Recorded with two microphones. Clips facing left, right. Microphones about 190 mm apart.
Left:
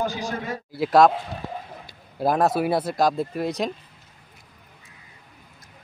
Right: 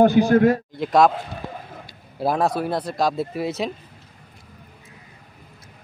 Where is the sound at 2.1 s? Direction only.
Centre (ahead or behind).